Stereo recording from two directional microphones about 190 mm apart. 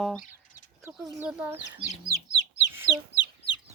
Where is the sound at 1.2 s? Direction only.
10° right (ahead or behind).